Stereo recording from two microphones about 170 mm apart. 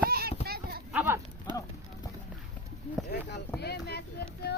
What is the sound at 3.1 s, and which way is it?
Speech, 80° left.